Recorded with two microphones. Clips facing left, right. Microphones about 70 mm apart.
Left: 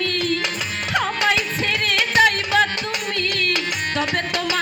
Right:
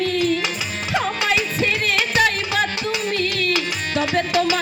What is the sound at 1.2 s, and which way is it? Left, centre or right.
Music, left.